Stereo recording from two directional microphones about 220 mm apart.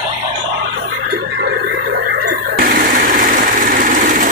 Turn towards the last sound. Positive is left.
turn(degrees=-35)  # may be behind; listen again after turning